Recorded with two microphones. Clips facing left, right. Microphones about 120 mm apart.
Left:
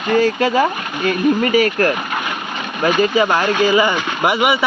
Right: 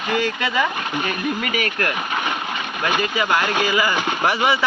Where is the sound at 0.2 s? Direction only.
35° left (ahead or behind).